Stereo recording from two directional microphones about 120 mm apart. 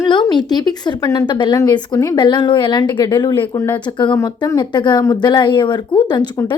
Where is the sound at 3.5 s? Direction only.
20° left (ahead or behind).